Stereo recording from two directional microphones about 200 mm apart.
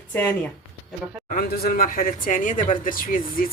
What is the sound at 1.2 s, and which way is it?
Speech, 45° left (ahead or behind).